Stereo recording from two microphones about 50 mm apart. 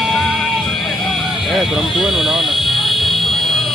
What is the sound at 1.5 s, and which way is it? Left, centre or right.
Fire alarm, centre.